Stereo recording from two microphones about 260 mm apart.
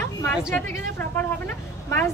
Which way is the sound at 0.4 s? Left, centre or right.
Centre.